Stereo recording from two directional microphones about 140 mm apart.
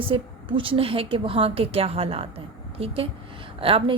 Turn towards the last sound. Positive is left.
turn(degrees=-40)  # may be behind; listen again after turning